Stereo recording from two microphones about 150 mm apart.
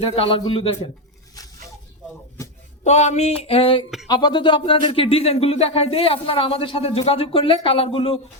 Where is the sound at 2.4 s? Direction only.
20° left (ahead or behind).